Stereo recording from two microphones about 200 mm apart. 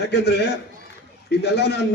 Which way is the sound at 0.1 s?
55° left (ahead or behind).